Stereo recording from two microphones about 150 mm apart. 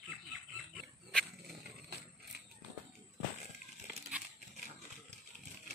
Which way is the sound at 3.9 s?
5° right (ahead or behind).